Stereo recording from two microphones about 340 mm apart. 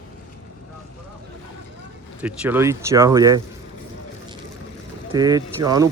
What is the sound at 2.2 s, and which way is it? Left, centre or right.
Speech, centre.